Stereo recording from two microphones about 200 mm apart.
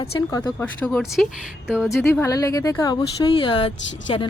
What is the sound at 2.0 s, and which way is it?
Speech, 10° left (ahead or behind).